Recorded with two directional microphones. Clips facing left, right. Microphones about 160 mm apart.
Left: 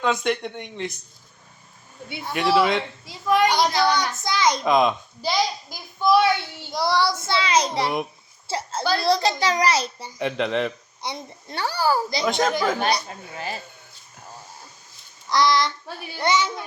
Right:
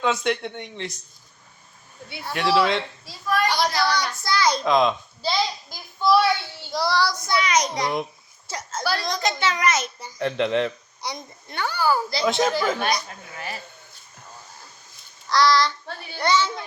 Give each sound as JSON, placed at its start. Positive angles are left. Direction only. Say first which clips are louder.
{"t": 0.0, "sound": "speech", "louder": "even", "side_deg": 0}
{"t": 2.3, "sound": "speech", "louder": "left 1 dB", "side_deg": 0}
{"t": 3.1, "sound": "a child's voice", "louder": "left 4 dB", "side_deg": 20}
{"t": 4.6, "sound": "a child's voice", "louder": "left 1 dB", "side_deg": 5}
{"t": 8.4, "sound": "a sound", "louder": "left 3 dB", "side_deg": 30}
{"t": 9.0, "sound": "a child's voice", "louder": "left 5 dB", "side_deg": 35}
{"t": 10.2, "sound": "a child's voice", "louder": "right 1 dB", "side_deg": 10}
{"t": 10.4, "sound": "speech", "louder": "right 2 dB", "side_deg": 0}
{"t": 11.0, "sound": "a child's voice", "louder": "left 1 dB", "side_deg": 30}
{"t": 12.2, "sound": "speech", "louder": "right 2 dB", "side_deg": 0}
{"t": 12.8, "sound": "a child's voice", "louder": "left 2 dB", "side_deg": 30}
{"t": 15.3, "sound": "a child's voice", "louder": "right 1 dB", "side_deg": 20}